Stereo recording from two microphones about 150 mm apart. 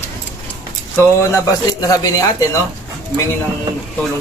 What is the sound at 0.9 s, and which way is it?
Speech, 20° left (ahead or behind).